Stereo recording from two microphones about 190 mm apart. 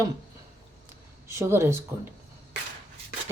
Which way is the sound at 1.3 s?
15° right (ahead or behind).